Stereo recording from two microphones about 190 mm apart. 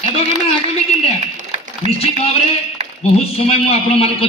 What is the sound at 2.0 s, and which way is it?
A man's voice, 30° left (ahead or behind).